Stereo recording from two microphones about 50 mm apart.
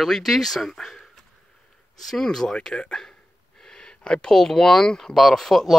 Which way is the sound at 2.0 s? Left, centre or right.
Centre.